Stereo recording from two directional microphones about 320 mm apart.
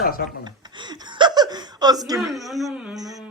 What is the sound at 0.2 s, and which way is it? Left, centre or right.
Speech, left.